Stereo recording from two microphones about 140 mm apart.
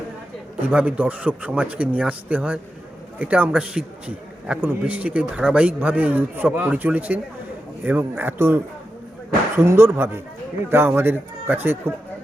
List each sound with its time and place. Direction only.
0.6 s a man's voice: 10° right (ahead or behind)